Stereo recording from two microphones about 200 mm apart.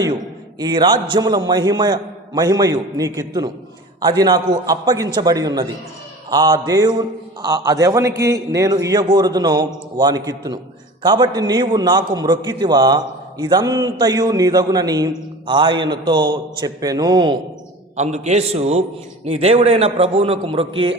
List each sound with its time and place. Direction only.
0.6 s a man's voice: 20° right (ahead or behind)
17.9 s a man's voice: 35° right (ahead or behind)